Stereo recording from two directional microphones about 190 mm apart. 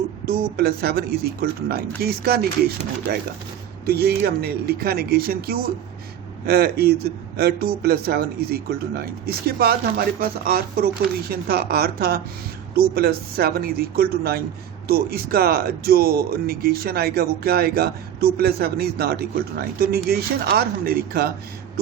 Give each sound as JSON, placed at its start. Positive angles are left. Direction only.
{"t": 0.5, "sound": "a man's voice", "side_deg": -55}